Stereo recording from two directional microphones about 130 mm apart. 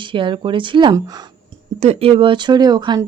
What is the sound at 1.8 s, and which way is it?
Speech, 50° right (ahead or behind).